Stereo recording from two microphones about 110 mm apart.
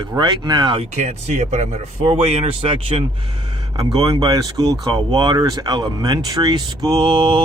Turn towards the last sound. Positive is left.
turn(degrees=-50)  # may be behind; listen again after turning